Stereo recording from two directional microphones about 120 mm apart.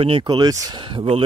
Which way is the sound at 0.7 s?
45° right (ahead or behind).